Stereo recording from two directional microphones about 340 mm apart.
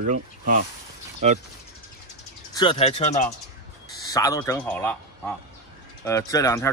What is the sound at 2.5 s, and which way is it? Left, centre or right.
A man's voice, centre.